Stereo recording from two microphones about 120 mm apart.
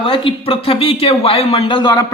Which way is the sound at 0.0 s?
45° left (ahead or behind).